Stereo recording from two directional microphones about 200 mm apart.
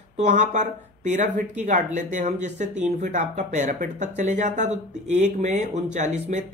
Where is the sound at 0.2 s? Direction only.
35° right (ahead or behind).